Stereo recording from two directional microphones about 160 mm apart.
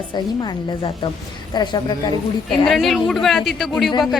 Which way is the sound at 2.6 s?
Centre (ahead or behind).